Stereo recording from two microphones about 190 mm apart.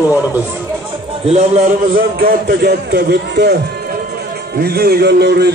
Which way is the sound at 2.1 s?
55° right (ahead or behind).